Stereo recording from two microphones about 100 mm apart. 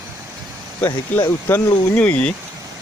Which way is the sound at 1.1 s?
15° left (ahead or behind).